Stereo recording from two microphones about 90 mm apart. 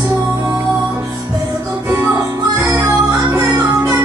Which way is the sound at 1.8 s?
30° right (ahead or behind).